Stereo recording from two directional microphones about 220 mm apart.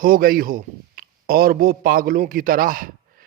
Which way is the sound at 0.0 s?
40° right (ahead or behind).